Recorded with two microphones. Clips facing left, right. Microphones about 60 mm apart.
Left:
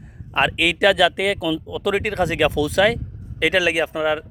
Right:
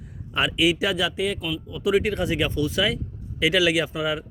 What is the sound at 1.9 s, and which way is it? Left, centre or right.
Speech, left.